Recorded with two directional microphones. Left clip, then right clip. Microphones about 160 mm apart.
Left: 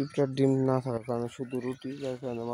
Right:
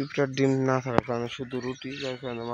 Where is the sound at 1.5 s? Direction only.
30° right (ahead or behind).